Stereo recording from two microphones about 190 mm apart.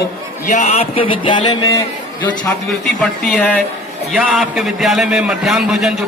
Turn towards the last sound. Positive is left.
turn(degrees=0)  # may be behind; listen again after turning